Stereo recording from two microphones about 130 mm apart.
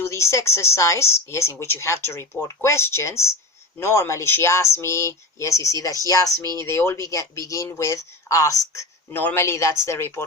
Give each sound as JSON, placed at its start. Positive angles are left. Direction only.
{"t": 0.0, "sound": "speech", "side_deg": 20}